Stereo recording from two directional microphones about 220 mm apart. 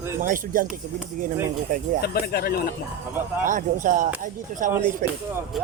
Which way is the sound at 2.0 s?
45° left (ahead or behind).